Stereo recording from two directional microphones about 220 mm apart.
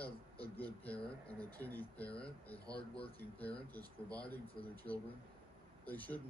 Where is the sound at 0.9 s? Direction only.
5° left (ahead or behind).